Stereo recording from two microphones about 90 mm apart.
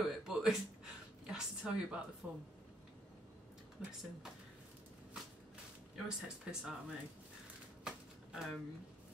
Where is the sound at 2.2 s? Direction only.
15° right (ahead or behind).